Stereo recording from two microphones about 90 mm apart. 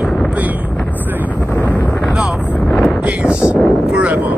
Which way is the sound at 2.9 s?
10° right (ahead or behind).